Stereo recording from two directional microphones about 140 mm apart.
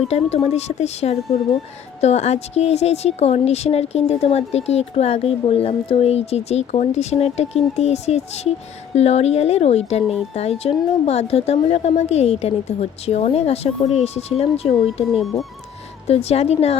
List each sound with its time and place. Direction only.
0.1 s speech: 50° left (ahead or behind)
15.1 s speech: centre (ahead or behind)
16.0 s speech: 45° left (ahead or behind)